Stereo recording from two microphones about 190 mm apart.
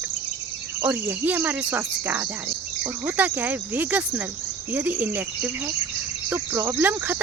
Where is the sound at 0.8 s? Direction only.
10° right (ahead or behind).